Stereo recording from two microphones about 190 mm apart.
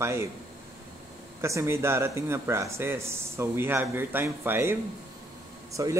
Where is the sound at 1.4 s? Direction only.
15° right (ahead or behind).